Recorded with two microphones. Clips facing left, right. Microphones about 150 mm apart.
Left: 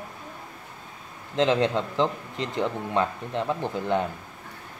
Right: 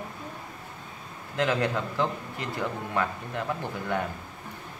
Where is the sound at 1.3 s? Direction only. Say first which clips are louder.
Left 4 dB; 25° left (ahead or behind).